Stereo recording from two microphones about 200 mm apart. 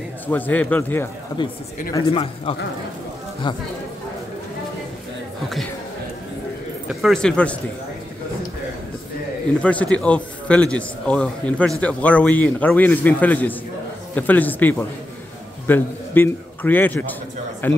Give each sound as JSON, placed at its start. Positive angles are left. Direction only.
{"t": 0.3, "sound": "a man's voice", "side_deg": 10}
{"t": 2.0, "sound": "speech", "side_deg": 30}
{"t": 6.9, "sound": "a man's voice", "side_deg": 0}
{"t": 9.6, "sound": "a man's voice", "side_deg": 5}